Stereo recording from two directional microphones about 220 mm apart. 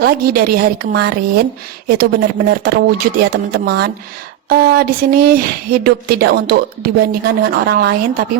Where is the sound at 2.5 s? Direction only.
45° right (ahead or behind).